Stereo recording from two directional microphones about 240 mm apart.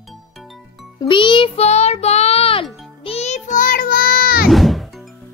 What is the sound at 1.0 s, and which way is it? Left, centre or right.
Music, centre.